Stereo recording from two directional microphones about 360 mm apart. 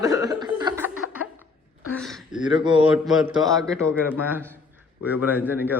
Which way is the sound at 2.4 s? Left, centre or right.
Centre.